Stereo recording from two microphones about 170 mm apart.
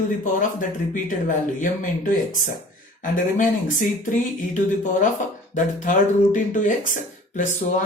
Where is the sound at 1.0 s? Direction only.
50° left (ahead or behind).